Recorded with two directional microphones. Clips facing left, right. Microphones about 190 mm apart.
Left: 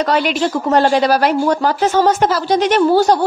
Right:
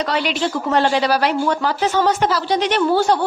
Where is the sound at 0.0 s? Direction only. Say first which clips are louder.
Left 4 dB; 45° left (ahead or behind).